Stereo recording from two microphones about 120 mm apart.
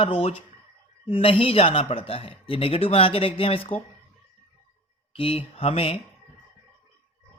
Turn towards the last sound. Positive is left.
turn(degrees=55)  # may be behind; listen again after turning